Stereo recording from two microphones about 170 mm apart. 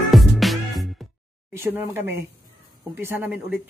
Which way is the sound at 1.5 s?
15° right (ahead or behind).